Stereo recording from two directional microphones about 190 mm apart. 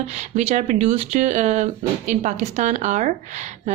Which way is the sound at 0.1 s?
35° right (ahead or behind).